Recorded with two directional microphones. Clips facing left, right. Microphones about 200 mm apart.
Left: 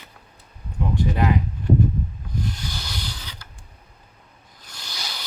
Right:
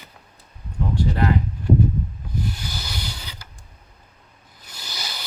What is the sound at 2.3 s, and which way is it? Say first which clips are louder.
Rub: right 1 dB; 5° right (ahead or behind).